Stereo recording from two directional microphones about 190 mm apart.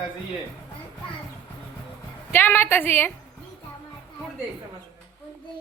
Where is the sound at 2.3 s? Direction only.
10° left (ahead or behind).